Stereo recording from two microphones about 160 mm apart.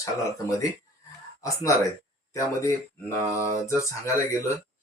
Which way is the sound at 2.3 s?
20° left (ahead or behind).